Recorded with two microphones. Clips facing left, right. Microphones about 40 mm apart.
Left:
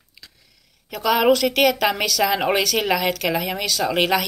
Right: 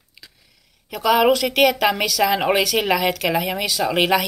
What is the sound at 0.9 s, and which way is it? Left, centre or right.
A woman's voice, centre.